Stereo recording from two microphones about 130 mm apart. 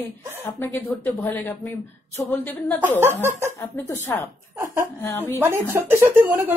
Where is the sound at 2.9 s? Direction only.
20° right (ahead or behind).